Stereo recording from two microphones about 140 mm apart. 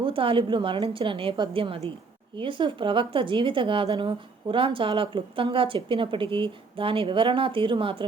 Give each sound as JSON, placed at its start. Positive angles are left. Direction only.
{"t": 0.0, "sound": "speech", "side_deg": -40}